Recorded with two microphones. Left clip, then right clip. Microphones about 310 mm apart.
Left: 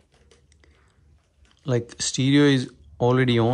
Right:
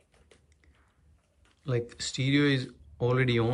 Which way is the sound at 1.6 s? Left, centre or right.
Centre.